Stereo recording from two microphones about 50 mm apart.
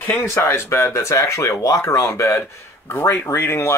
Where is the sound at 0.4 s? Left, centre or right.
Left.